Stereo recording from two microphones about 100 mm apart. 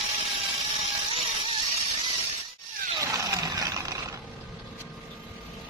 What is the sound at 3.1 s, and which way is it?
Vehicle, 35° right (ahead or behind).